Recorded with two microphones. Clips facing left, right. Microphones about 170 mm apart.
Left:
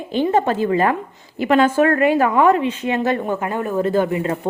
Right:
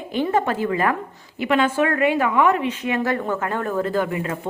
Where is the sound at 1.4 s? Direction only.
40° left (ahead or behind).